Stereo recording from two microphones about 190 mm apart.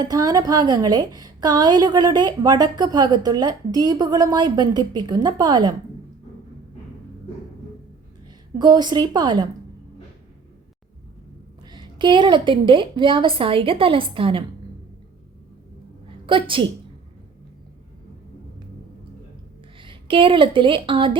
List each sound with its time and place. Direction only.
0.0 s a woman's voice: 20° right (ahead or behind)
8.5 s a woman's voice: 20° right (ahead or behind)
11.6 s a woman's voice: 25° right (ahead or behind)
16.2 s a woman's voice: 25° right (ahead or behind)
19.8 s speech: 25° right (ahead or behind)